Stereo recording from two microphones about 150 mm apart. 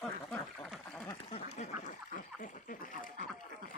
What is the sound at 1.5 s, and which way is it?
Duck, 45° left (ahead or behind).